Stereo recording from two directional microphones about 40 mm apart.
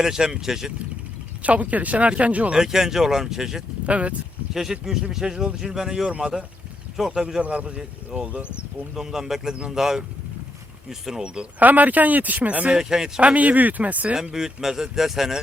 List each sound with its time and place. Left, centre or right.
0.0 s speech: centre
1.4 s speech: right
2.6 s speech: centre
3.8 s speech: right
4.5 s speech: centre
7.1 s speech: centre
7.4 s speech: right
9.0 s speech: centre
11.6 s speech: right
12.7 s speech: centre
13.1 s speech: right
14.3 s speech: centre